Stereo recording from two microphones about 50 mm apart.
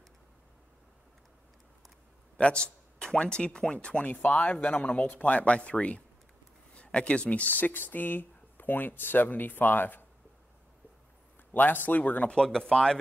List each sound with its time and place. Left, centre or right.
2.3 s speech: left
11.5 s speech: left
12.4 s speech: centre